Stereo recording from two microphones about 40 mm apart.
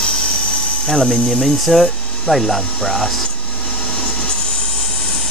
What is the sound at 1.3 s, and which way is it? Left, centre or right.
Speech, centre.